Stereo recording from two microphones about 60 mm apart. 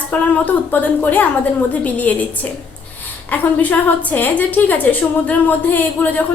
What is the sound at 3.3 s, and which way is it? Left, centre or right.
A woman's voice, left.